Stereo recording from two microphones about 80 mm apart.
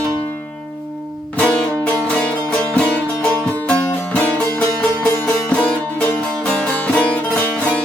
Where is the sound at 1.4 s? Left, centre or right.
Centre.